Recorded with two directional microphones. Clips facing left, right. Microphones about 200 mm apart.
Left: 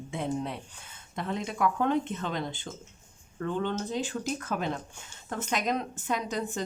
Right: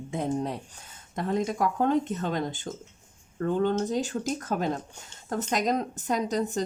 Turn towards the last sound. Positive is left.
turn(degrees=-40)  # may be behind; listen again after turning